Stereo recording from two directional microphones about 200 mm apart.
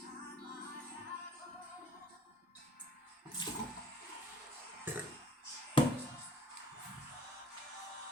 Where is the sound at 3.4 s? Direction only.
20° left (ahead or behind).